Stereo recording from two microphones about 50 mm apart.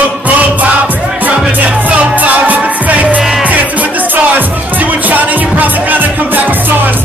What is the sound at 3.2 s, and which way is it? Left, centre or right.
Music, centre.